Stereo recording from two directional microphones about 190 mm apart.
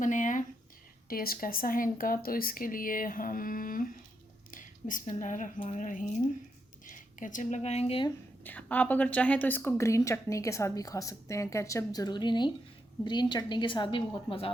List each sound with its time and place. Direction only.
0.0 s speech: 40° left (ahead or behind)
8.4 s a woman's voice: 10° left (ahead or behind); by 14.5 s 30° left (ahead or behind)